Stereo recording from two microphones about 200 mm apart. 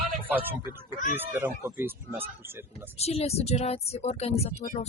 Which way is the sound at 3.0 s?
30° left (ahead or behind).